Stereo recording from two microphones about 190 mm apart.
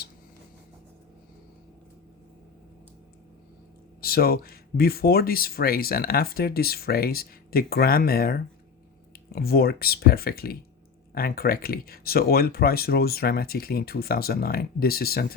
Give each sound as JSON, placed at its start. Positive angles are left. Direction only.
{"t": 4.0, "sound": "speech", "side_deg": 55}